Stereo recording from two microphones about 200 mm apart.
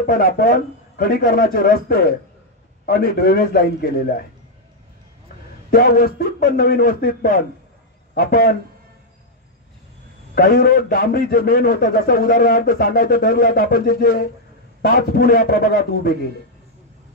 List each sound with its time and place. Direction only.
0.0 s a man's voice: 45° left (ahead or behind)
5.7 s a man's voice: 50° left (ahead or behind)
10.3 s a man's voice: 45° left (ahead or behind)